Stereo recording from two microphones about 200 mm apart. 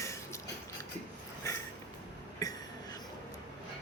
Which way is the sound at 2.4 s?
15° left (ahead or behind).